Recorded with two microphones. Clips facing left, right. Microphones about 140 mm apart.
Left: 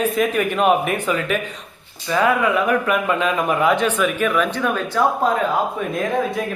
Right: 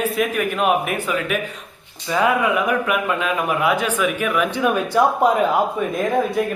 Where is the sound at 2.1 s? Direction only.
20° right (ahead or behind).